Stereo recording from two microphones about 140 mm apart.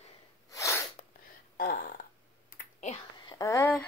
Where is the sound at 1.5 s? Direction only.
90° left.